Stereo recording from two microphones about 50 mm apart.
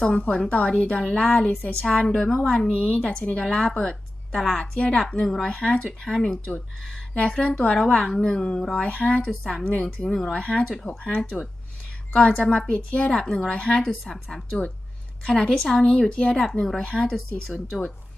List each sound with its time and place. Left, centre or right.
0.0 s a woman's voice: left; by 13.3 s centre
13.5 s a woman's voice: centre
14.0 s speech: centre